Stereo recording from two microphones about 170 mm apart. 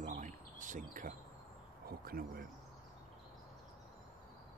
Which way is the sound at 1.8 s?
60° right (ahead or behind).